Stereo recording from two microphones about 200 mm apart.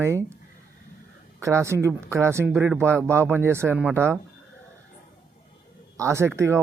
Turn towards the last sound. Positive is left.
turn(degrees=-15)  # may be behind; listen again after turning